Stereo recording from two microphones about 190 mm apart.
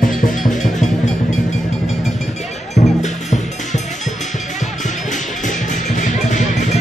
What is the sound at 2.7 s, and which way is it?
Music, 40° left (ahead or behind).